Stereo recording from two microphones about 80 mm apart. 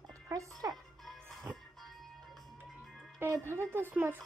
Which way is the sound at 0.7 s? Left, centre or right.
Centre.